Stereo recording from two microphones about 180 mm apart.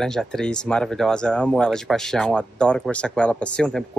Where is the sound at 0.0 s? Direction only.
5° left (ahead or behind).